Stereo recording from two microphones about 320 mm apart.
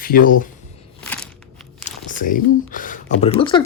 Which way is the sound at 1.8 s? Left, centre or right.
Left.